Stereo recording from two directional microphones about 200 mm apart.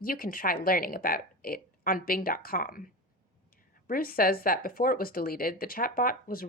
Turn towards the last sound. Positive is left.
turn(degrees=45)  # may be behind; listen again after turning